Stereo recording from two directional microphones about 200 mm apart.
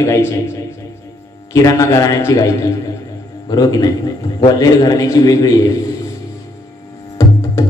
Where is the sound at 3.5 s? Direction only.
20° left (ahead or behind).